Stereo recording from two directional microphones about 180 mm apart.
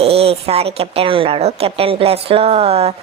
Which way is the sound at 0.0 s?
35° right (ahead or behind).